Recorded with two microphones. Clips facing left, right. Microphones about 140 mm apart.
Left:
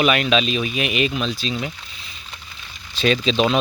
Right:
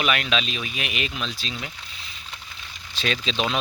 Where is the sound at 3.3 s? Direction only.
35° left (ahead or behind).